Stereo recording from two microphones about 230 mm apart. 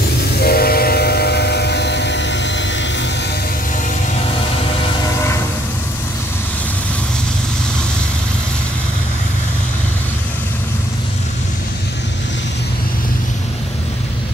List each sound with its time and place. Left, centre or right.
0.4 s train: left